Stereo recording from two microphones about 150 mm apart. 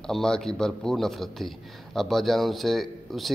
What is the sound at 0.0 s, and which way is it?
Speech, 5° left (ahead or behind).